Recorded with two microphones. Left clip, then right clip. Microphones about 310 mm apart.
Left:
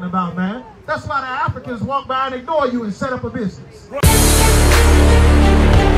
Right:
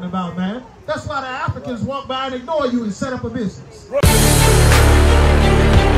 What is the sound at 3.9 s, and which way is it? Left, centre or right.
Music, centre.